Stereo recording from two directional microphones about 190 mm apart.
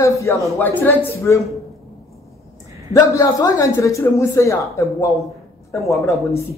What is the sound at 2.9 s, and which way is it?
A man's voice, 15° left (ahead or behind).